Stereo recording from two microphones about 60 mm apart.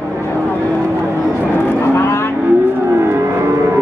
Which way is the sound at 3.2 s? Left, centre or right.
Right.